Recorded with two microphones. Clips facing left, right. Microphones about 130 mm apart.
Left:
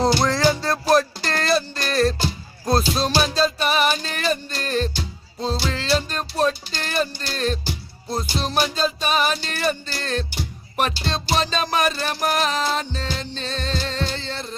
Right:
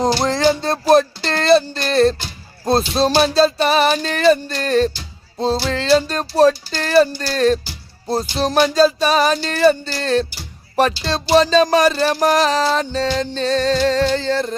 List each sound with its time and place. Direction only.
0.0 s music: 25° right (ahead or behind); by 14.5 s 40° right (ahead or behind)